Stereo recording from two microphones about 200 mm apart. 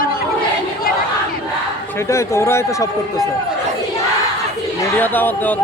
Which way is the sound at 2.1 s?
15° left (ahead or behind).